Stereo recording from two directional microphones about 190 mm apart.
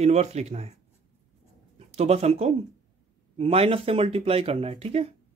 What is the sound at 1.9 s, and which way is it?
Speech, 35° right (ahead or behind).